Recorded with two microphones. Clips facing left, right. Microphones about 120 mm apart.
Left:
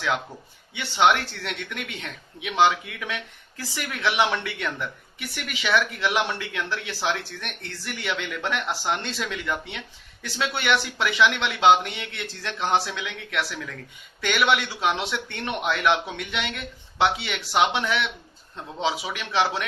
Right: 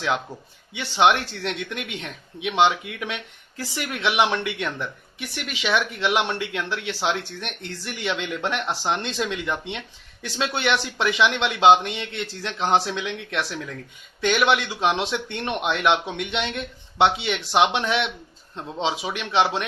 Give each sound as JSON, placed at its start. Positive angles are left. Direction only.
{"t": 0.8, "sound": "speech", "side_deg": -20}